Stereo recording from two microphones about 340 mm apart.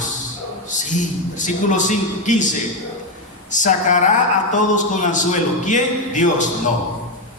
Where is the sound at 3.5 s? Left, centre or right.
Left.